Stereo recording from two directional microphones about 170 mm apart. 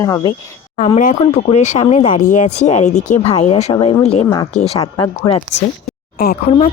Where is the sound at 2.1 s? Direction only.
50° left (ahead or behind); by 5.6 s 30° left (ahead or behind).